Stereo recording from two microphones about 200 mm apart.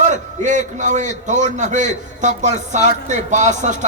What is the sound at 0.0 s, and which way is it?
A man's voice, 40° right (ahead or behind).